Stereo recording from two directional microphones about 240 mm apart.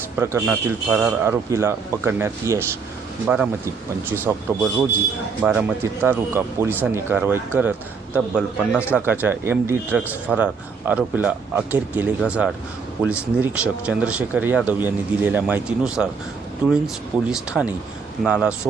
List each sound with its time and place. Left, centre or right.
0.2 s a man's voice: centre
5.4 s a man's voice: centre
9.0 s a man's voice: centre